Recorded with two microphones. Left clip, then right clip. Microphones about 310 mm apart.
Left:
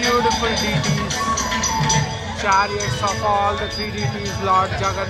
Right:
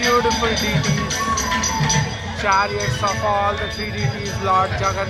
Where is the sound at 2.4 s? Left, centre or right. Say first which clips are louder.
Even; centre.